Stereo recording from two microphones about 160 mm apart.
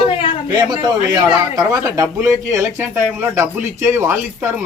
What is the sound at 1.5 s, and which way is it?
Speech, 20° right (ahead or behind).